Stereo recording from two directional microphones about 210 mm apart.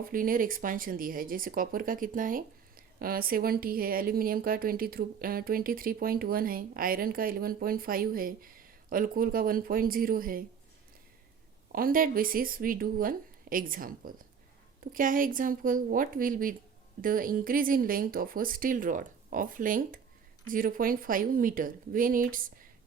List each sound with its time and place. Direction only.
0.0 s speech: 40° right (ahead or behind)
11.7 s speech: 45° right (ahead or behind)